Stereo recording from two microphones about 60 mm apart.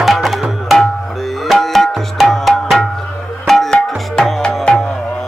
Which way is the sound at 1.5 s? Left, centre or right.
Centre.